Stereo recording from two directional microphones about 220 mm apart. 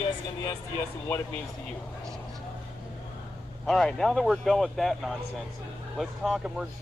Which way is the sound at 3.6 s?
Centre (ahead or behind).